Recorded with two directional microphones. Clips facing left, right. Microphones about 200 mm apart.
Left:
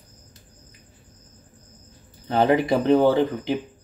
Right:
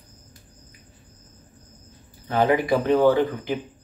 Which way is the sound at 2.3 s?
25° left (ahead or behind).